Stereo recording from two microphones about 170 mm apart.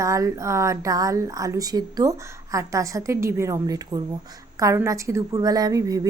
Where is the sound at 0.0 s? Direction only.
20° right (ahead or behind).